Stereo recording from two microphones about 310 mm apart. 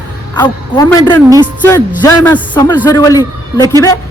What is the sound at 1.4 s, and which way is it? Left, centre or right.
Music, centre.